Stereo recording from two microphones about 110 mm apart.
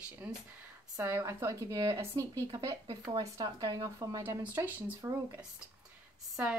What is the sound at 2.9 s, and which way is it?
Speech, 40° right (ahead or behind).